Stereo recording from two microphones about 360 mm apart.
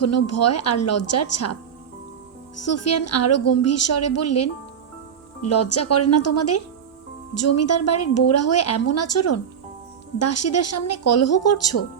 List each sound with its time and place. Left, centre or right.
0.0 s a woman's voice: left
2.6 s a woman's voice: left